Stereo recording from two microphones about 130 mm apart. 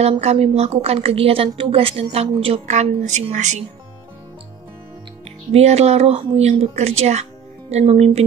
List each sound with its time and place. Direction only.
0.2 s a woman's voice: 55° right (ahead or behind)
2.7 s speech: 65° right (ahead or behind)
5.5 s a woman's voice: 55° right (ahead or behind)